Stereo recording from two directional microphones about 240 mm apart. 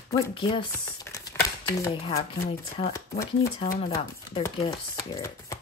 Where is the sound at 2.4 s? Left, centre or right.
Left.